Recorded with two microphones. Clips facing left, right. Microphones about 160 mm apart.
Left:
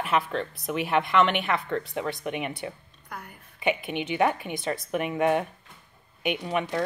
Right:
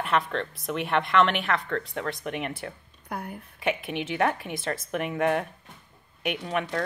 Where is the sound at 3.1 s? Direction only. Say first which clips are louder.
Right 6 dB; 55° right (ahead or behind).